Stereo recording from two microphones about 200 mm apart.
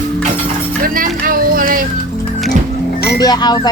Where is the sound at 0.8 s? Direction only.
45° right (ahead or behind).